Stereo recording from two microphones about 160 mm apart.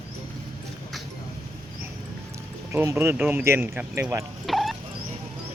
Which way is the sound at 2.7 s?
15° right (ahead or behind).